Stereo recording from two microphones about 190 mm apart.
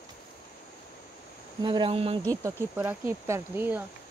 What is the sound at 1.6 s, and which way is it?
Speech, 25° right (ahead or behind).